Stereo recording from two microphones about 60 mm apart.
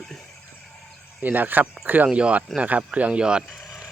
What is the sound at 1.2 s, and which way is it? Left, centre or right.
Speech, right.